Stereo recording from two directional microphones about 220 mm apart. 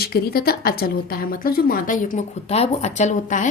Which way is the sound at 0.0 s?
45° left (ahead or behind).